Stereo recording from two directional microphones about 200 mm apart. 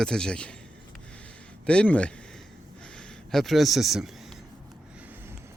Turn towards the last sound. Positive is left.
turn(degrees=0)  # may be behind; listen again after turning